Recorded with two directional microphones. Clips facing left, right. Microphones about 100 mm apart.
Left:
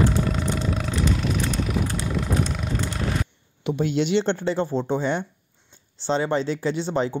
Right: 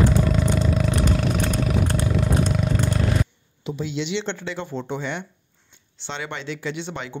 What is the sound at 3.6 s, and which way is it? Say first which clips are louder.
Speech: left 5 dB; 55° left (ahead or behind).